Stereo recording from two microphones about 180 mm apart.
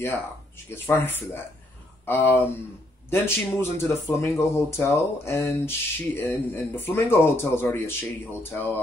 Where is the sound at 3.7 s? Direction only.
15° left (ahead or behind).